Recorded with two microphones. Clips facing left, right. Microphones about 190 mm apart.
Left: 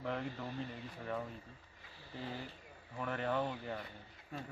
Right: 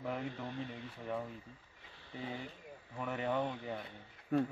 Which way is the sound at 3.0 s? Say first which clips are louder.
Right 1 dB; 5° right (ahead or behind).